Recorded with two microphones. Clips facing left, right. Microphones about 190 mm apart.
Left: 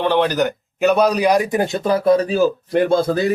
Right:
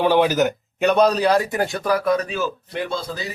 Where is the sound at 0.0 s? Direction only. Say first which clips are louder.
Even; 10° right (ahead or behind); by 2.5 s 35° left (ahead or behind).